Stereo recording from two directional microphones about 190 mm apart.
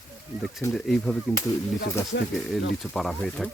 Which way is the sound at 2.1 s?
75° left (ahead or behind).